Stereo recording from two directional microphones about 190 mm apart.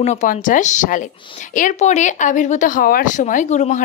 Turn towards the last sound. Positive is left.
turn(degrees=40)  # may be behind; listen again after turning